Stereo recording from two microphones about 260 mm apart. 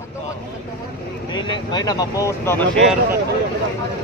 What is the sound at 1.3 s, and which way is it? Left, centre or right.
Speech, centre.